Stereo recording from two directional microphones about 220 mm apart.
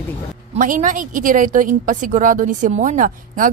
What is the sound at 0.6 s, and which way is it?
A woman's voice, 35° right (ahead or behind).